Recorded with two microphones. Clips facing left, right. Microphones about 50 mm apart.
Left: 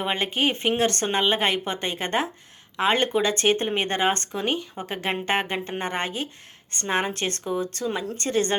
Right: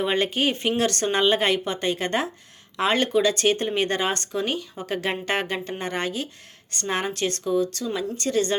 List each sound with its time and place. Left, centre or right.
0.0 s speech: centre
0.8 s speech: left